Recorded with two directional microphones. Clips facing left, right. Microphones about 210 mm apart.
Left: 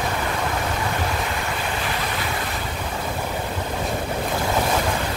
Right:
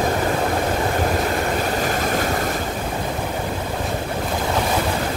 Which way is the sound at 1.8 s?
45° right (ahead or behind).